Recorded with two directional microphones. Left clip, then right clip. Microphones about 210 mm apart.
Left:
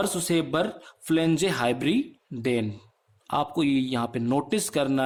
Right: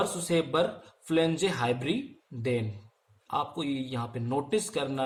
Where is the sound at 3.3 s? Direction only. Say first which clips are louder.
Left 6 dB; 50° left (ahead or behind).